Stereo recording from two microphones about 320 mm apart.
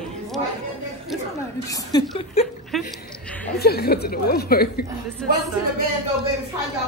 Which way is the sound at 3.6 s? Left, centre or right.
Left.